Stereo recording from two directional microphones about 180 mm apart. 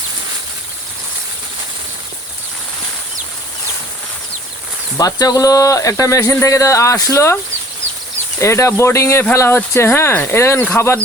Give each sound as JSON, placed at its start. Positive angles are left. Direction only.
{"t": 4.9, "sound": "speech", "side_deg": 20}
{"t": 8.4, "sound": "speech", "side_deg": 15}